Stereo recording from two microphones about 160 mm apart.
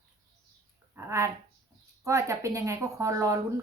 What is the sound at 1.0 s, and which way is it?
A woman's voice, 20° right (ahead or behind).